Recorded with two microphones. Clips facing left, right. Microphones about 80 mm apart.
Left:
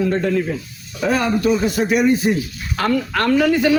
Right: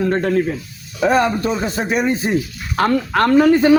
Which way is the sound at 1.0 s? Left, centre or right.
Right.